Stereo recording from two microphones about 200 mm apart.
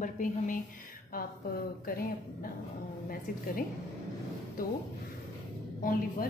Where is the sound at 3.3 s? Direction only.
45° left (ahead or behind).